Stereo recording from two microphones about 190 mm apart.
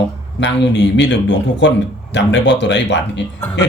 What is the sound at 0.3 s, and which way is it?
A man's voice, 70° left (ahead or behind).